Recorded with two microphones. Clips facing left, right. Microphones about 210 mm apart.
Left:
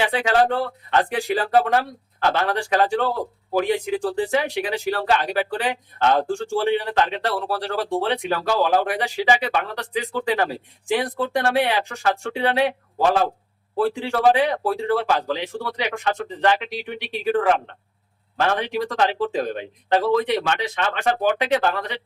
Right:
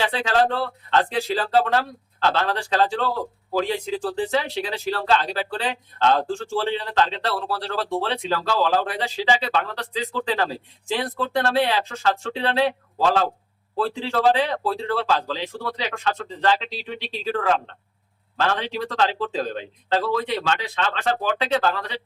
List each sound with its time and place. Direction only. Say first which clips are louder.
0.0 s a man's voice: left 2 dB; 15° left (ahead or behind)